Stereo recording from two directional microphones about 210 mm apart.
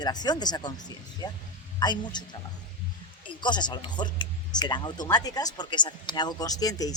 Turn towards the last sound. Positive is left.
turn(degrees=15)  # may be behind; listen again after turning